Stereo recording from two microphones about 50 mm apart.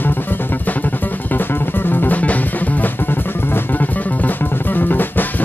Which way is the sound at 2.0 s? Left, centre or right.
Left.